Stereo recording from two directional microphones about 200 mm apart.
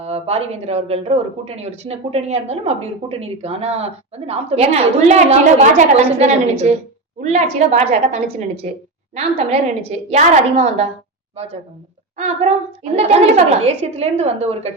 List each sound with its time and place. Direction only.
0.0 s a woman's voice: 30° right (ahead or behind)
12.1 s speech: 35° right (ahead or behind)